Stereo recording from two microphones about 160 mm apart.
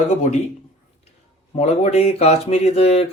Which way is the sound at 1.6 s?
40° left (ahead or behind).